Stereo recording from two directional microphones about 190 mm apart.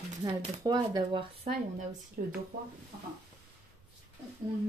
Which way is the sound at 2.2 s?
45° right (ahead or behind).